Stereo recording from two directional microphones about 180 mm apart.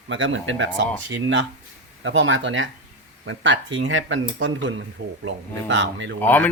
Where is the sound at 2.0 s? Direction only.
90° right.